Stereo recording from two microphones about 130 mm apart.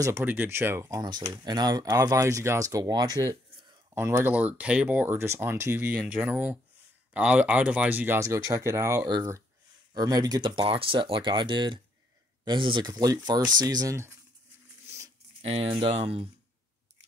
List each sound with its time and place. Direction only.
0.0 s speech: 15° right (ahead or behind)
14.9 s a sound: 25° right (ahead or behind)
15.4 s speech: 50° right (ahead or behind)